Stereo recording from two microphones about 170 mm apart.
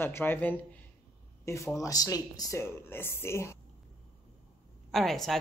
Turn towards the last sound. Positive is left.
turn(degrees=0)  # may be behind; listen again after turning